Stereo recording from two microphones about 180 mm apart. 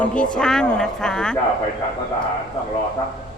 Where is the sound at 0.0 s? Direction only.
5° left (ahead or behind).